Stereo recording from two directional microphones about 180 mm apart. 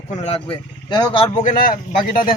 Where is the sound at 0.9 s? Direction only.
25° left (ahead or behind).